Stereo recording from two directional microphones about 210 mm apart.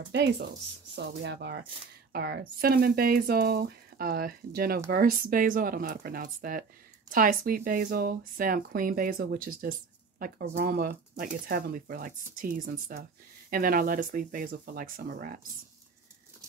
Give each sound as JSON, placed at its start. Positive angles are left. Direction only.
{"t": 0.1, "sound": "speech", "side_deg": -55}